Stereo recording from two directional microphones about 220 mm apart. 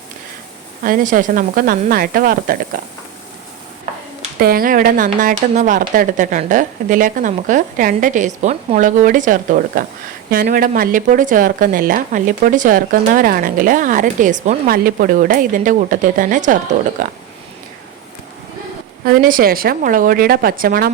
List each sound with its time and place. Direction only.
0.9 s speech: 40° right (ahead or behind)
4.2 s speech: 40° right (ahead or behind)
19.2 s speech: 40° right (ahead or behind)